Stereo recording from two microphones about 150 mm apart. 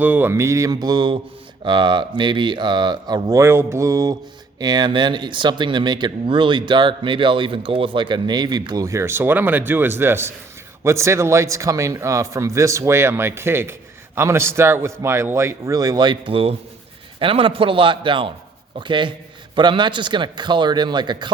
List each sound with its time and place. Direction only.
0.0 s a man's voice: 10° right (ahead or behind); by 21.3 s 30° right (ahead or behind)